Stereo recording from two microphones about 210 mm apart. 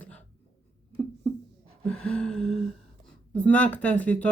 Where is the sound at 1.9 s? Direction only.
5° left (ahead or behind).